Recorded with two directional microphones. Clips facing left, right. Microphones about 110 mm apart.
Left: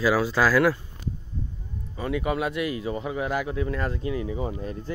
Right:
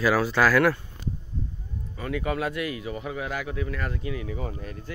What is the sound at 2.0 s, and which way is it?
Speech, 20° left (ahead or behind).